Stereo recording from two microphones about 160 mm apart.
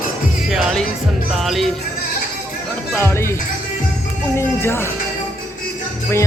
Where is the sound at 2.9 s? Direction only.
15° left (ahead or behind).